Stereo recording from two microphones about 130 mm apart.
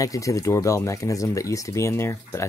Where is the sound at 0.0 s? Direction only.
25° left (ahead or behind).